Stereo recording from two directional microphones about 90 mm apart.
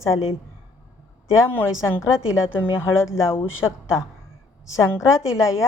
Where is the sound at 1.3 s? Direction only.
30° left (ahead or behind).